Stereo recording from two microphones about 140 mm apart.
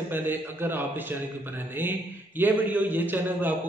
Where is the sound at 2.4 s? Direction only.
10° right (ahead or behind).